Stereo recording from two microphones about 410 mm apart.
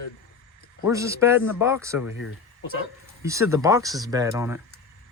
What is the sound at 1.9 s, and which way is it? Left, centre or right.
Speech, left.